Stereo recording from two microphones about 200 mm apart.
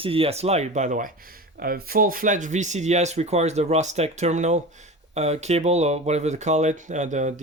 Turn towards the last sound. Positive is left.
turn(degrees=-35)  # may be behind; listen again after turning